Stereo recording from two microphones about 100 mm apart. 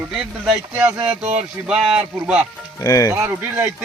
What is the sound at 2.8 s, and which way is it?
Speech, 35° left (ahead or behind).